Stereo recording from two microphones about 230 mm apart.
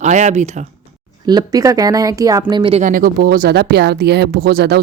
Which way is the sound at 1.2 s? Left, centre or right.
Centre.